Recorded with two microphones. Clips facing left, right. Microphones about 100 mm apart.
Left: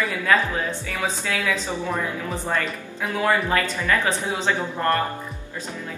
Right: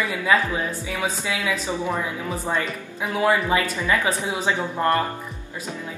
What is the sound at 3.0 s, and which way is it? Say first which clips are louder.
Speech: right 1 dB; 15° right (ahead or behind).